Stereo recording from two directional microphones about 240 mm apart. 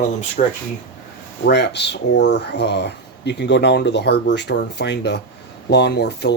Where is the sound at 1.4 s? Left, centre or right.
Left.